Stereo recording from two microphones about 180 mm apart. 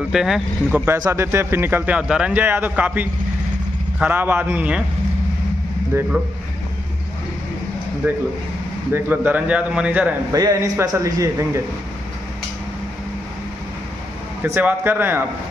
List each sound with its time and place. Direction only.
0.1 s speech: centre (ahead or behind)
8.0 s speech: 10° right (ahead or behind)
10.3 s speech: 20° right (ahead or behind)
14.4 s speech: 10° right (ahead or behind)